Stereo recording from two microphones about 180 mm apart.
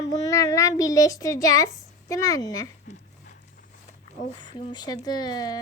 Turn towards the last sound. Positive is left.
turn(degrees=20)  # may be behind; listen again after turning